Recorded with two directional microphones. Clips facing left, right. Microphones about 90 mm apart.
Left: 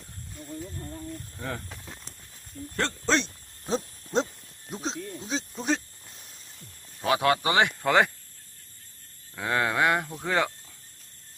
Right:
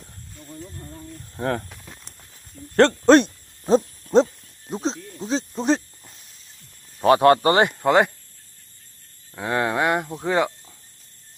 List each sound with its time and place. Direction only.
0.6 s speech: centre (ahead or behind)
1.4 s speech: 55° right (ahead or behind)
1.7 s snake: centre (ahead or behind)
2.7 s speech: 60° right (ahead or behind)
4.7 s snake: 35° right (ahead or behind)
7.0 s speech: 40° right (ahead or behind)
7.8 s speech: 20° right (ahead or behind)
9.3 s speech: 25° right (ahead or behind)